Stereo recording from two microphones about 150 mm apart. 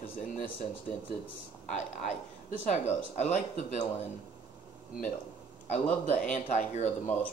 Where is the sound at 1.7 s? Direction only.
50° left (ahead or behind).